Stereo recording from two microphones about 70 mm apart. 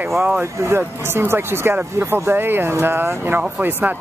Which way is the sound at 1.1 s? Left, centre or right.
Right.